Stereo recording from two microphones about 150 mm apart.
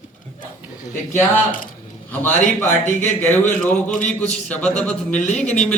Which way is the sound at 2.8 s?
50° left (ahead or behind).